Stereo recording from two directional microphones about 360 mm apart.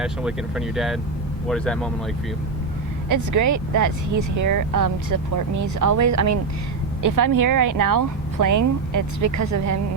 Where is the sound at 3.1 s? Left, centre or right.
Right.